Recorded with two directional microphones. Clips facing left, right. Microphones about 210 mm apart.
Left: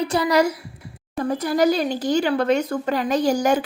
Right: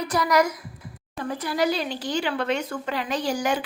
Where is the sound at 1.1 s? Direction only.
40° left (ahead or behind).